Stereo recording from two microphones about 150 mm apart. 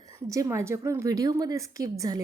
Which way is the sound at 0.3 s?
20° right (ahead or behind).